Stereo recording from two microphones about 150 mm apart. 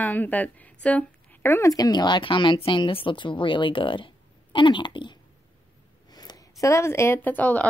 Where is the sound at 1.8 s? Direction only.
25° left (ahead or behind).